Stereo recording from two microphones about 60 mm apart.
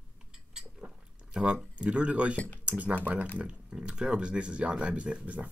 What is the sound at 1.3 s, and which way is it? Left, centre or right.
Speech, centre.